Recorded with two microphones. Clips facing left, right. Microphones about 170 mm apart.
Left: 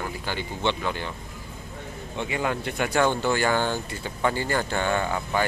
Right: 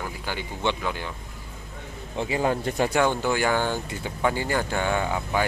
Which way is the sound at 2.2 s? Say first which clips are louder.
Right 3 dB; 30° right (ahead or behind).